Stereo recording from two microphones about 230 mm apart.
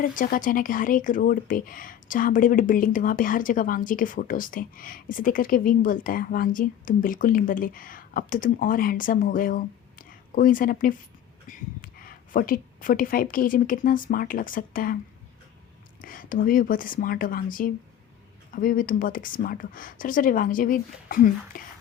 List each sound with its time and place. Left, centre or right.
0.0 s a woman's voice: left
16.0 s speech: left